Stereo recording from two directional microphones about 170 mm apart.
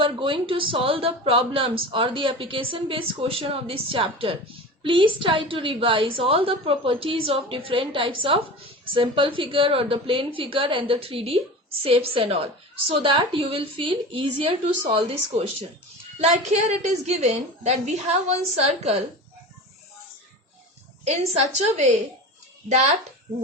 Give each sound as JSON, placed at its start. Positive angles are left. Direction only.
{"t": 0.0, "sound": "speech", "side_deg": -30}
{"t": 21.0, "sound": "speech", "side_deg": -40}